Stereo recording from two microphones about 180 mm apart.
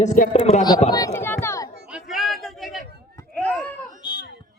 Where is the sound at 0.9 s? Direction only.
15° left (ahead or behind).